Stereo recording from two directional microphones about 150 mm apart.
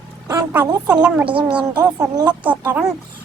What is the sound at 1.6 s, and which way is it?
Speech, 25° right (ahead or behind).